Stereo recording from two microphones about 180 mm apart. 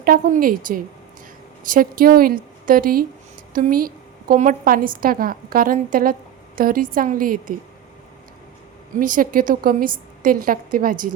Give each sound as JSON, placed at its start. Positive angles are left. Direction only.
{"t": 0.0, "sound": "a woman's voice", "side_deg": -55}
{"t": 9.0, "sound": "a woman's voice", "side_deg": -50}